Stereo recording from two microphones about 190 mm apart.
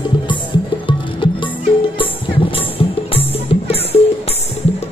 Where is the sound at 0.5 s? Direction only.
25° left (ahead or behind).